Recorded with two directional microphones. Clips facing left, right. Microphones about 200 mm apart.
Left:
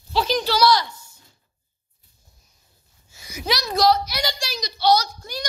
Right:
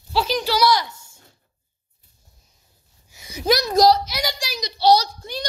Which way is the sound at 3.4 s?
45° right (ahead or behind).